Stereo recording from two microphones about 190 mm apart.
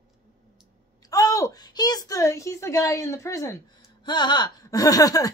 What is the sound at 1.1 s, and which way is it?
A woman's voice, 15° left (ahead or behind).